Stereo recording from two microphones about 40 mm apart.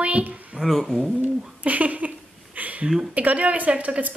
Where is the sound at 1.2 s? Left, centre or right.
Right.